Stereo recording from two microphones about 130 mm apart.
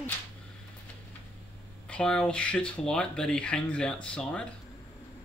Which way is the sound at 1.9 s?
5° left (ahead or behind).